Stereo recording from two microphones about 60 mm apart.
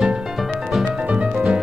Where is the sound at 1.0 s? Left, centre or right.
Centre.